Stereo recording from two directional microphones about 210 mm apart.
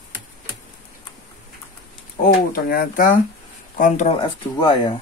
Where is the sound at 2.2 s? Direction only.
40° left (ahead or behind); by 5.0 s 25° left (ahead or behind).